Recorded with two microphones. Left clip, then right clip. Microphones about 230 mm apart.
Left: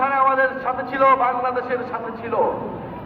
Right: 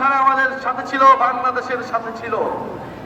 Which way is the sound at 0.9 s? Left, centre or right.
Right.